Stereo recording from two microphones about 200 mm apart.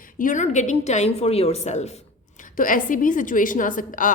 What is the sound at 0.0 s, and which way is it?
A woman's voice, 40° left (ahead or behind).